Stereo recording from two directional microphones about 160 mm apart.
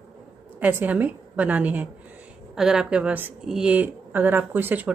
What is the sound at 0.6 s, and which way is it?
Speech, 10° right (ahead or behind).